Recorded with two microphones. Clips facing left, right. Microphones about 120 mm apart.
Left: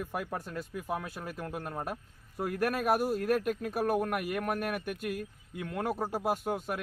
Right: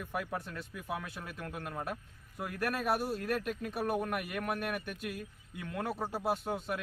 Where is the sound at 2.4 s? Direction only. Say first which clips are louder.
Left 5 dB; 40° left (ahead or behind).